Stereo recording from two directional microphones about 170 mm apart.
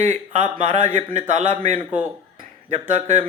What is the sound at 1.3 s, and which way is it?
Speech, 45° right (ahead or behind).